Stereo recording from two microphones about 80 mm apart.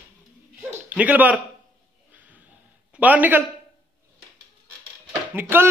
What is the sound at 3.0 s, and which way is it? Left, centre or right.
Speech, right.